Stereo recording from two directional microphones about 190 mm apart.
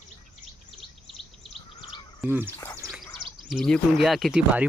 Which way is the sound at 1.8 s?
25° left (ahead or behind).